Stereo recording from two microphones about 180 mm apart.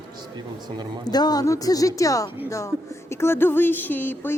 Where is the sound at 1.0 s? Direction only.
20° left (ahead or behind).